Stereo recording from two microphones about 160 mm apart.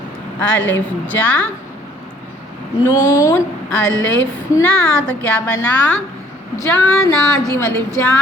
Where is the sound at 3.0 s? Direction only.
20° left (ahead or behind).